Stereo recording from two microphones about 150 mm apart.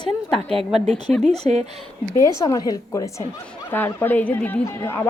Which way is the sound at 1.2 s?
45° right (ahead or behind).